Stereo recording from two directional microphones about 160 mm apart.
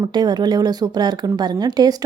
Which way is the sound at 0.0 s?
25° right (ahead or behind).